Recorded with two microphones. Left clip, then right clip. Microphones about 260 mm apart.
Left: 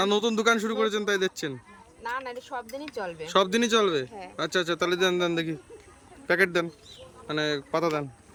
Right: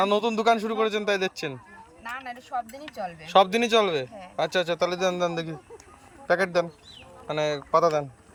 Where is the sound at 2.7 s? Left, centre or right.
Centre.